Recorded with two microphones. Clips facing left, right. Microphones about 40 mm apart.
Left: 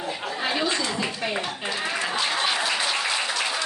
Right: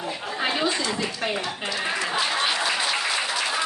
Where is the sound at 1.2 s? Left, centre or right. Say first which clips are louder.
Right 2 dB; right.